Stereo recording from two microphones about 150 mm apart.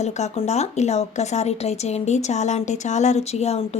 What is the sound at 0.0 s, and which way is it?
A woman's voice, 50° left (ahead or behind).